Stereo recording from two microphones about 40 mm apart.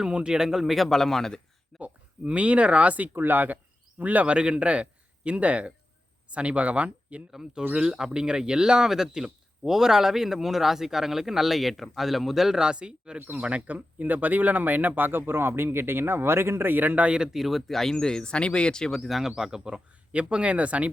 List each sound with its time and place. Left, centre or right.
0.1 s speech: right; by 1.4 s centre
1.8 s speech: right
3.2 s a man's voice: right
7.3 s speech: centre
12.5 s speech: right
13.1 s speech: right
13.4 s speech: right
17.3 s speech: centre
17.7 s speech: centre
18.9 s speech: centre
19.4 s speech: centre
20.3 s speech: right